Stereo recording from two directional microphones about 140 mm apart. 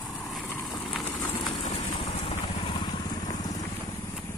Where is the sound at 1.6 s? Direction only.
50° left (ahead or behind).